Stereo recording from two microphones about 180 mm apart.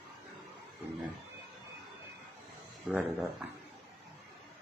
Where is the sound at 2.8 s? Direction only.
Centre (ahead or behind).